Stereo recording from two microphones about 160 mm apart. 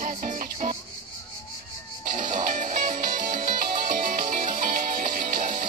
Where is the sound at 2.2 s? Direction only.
55° right (ahead or behind).